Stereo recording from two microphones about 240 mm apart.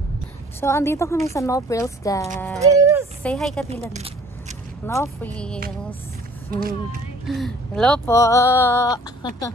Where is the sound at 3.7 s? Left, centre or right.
Right.